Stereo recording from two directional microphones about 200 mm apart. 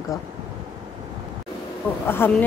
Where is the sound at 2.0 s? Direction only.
10° left (ahead or behind).